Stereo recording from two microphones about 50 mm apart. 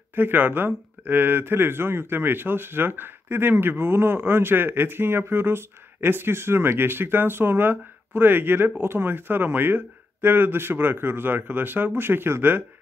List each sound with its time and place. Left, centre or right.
0.1 s speech: right